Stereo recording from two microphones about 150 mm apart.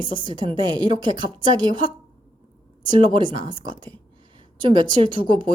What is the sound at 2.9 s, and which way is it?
Speech, 35° right (ahead or behind).